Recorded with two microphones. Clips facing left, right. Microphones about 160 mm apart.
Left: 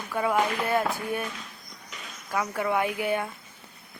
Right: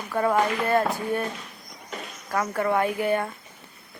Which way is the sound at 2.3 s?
5° left (ahead or behind).